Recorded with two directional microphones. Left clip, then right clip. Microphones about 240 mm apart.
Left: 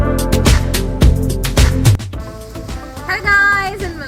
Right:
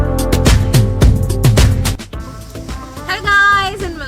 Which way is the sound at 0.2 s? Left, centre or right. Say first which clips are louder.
Right 1 dB; centre.